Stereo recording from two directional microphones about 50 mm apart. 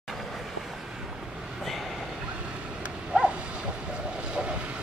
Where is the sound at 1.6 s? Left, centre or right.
Centre.